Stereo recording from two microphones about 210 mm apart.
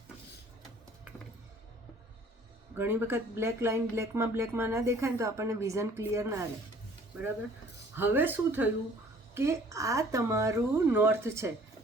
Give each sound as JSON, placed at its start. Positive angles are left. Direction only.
{"t": 2.7, "sound": "speech", "side_deg": -10}
{"t": 7.9, "sound": "speech", "side_deg": -10}